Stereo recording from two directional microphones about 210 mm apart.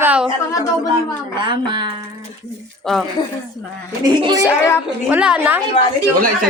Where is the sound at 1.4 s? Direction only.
20° right (ahead or behind).